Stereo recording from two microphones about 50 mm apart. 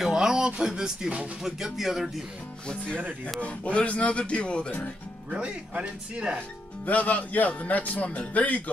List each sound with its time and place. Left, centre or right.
0.0 s a sound: centre
0.6 s speech: centre
2.7 s speech: centre
5.3 s speech: right
6.9 s speech: left